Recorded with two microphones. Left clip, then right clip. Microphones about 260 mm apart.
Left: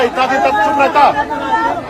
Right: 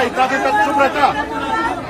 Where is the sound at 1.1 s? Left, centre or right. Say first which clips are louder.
Left 4 dB; left.